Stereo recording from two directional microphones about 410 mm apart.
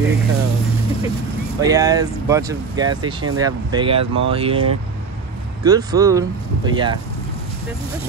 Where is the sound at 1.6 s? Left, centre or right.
Centre.